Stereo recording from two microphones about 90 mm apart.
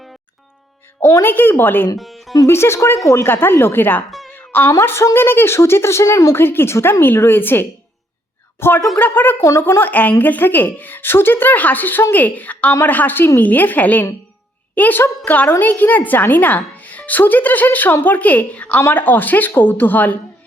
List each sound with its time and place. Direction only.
1.2 s a woman's voice: 20° left (ahead or behind)
2.0 s music: centre (ahead or behind)
2.5 s a woman's voice: 30° left (ahead or behind)
4.3 s a sound: 20° left (ahead or behind)
4.7 s a woman's voice: 30° left (ahead or behind)
6.3 s a woman's voice: 25° left (ahead or behind)